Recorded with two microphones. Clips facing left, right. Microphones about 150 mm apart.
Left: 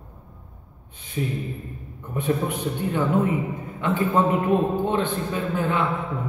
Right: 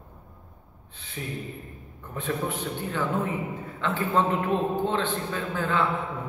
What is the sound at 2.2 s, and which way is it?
A man's voice, 15° left (ahead or behind).